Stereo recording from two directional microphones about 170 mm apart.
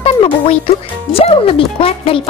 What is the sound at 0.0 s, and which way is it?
A child's voice, 35° left (ahead or behind).